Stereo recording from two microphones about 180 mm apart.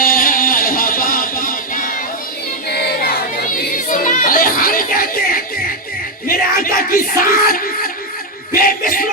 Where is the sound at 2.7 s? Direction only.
60° left (ahead or behind).